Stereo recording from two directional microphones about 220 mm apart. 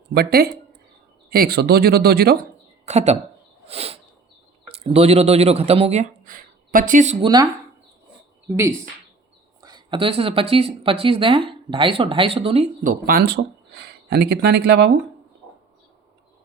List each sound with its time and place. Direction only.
0.1 s speech: 45° right (ahead or behind)
2.8 s speech: 30° right (ahead or behind)
3.7 s a sound: 25° right (ahead or behind)
4.7 s speech: 25° right (ahead or behind)
8.4 s speech: 10° right (ahead or behind); by 14.9 s 50° right (ahead or behind)